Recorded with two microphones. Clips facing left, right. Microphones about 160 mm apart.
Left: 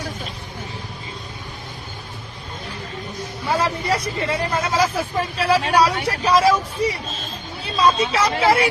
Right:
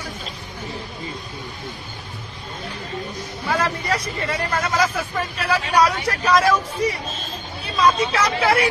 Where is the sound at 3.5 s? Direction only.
30° left (ahead or behind).